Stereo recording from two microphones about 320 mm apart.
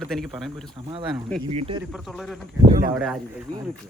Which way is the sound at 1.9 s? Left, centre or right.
Centre.